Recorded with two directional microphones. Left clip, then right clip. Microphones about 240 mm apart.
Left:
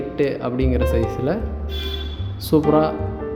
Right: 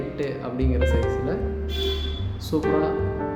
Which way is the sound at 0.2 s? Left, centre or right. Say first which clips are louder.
Left 9 dB; left.